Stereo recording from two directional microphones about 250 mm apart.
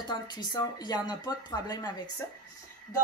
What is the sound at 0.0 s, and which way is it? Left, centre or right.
Speech, centre.